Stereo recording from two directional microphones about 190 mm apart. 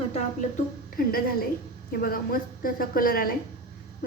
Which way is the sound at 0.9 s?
50° left (ahead or behind).